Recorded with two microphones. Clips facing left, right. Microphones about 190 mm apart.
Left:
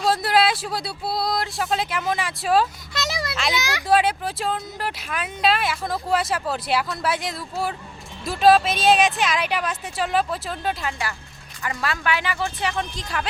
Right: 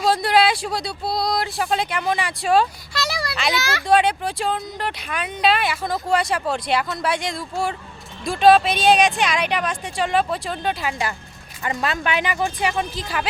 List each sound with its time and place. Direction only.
0.0 s speech: centre (ahead or behind)
2.9 s a sound: 20° left (ahead or behind)
3.3 s speech: centre (ahead or behind)
3.6 s a child's voice: 15° left (ahead or behind)
3.8 s speech: 5° left (ahead or behind)
11.6 s speech: 20° right (ahead or behind); by 13.2 s 5° right (ahead or behind)